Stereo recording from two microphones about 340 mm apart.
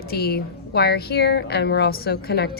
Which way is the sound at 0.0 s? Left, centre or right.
Left.